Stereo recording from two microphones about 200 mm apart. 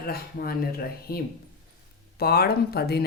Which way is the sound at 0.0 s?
50° left (ahead or behind).